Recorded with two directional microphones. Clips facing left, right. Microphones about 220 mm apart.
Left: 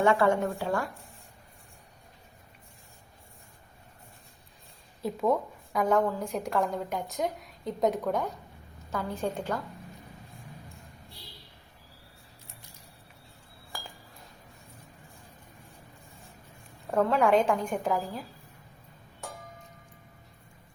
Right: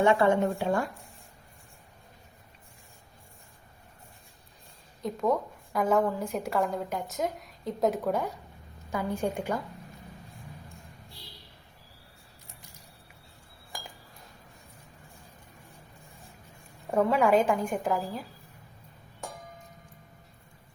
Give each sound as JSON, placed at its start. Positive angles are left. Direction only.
{"t": 0.0, "sound": "speech", "side_deg": -20}
{"t": 5.0, "sound": "a woman's voice", "side_deg": 5}
{"t": 16.9, "sound": "a woman's voice", "side_deg": -10}